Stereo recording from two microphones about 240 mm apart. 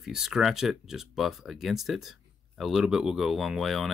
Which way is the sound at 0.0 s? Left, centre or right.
Centre.